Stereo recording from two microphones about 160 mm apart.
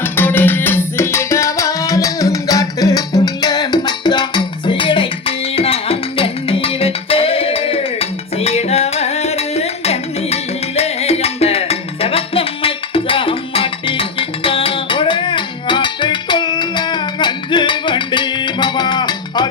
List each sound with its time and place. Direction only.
0.0 s music: 15° left (ahead or behind)